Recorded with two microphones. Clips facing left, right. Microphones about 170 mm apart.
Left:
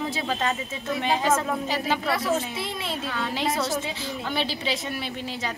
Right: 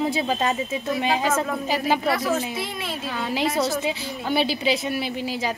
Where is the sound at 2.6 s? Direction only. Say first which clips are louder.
Even; 25° left (ahead or behind).